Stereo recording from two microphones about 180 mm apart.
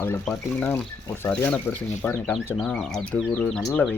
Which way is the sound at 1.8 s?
40° left (ahead or behind).